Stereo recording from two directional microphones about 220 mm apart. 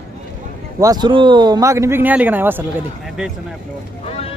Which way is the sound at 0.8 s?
20° right (ahead or behind).